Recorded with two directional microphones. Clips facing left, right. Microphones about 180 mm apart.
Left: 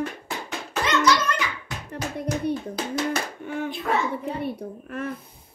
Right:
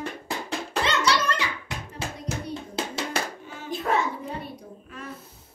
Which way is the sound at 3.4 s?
60° left (ahead or behind).